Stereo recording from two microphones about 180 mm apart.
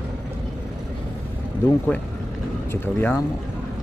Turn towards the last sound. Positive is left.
turn(degrees=10)  # may be behind; listen again after turning